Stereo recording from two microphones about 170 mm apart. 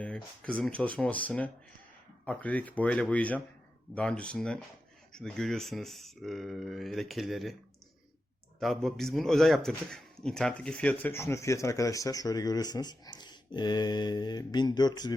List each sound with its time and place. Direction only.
0.0 s speech: 5° left (ahead or behind)
8.5 s speech: centre (ahead or behind); by 15.1 s 25° left (ahead or behind)